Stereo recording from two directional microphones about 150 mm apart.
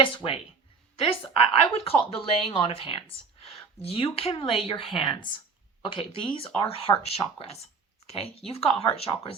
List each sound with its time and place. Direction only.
0.0 s speech: 35° left (ahead or behind)